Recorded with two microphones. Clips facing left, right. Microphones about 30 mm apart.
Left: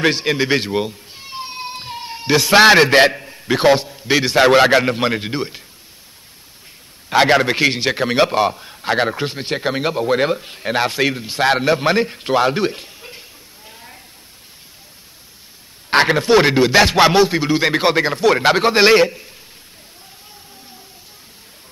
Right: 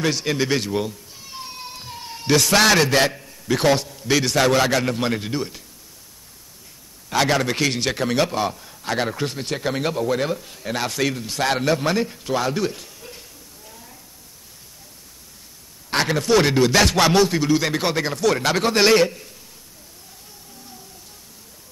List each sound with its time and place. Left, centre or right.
0.0 s speech: left
7.1 s a man's voice: left
10.1 s a man's voice: left
13.7 s a sound: left
15.9 s a man's voice: left